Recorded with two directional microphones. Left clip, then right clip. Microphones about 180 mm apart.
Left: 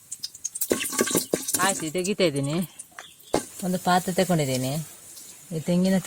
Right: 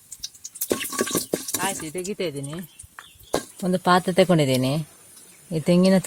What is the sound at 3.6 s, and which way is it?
Speech, 50° right (ahead or behind).